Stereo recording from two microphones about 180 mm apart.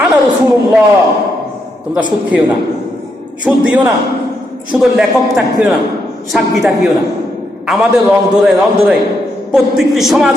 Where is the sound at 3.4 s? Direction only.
5° right (ahead or behind).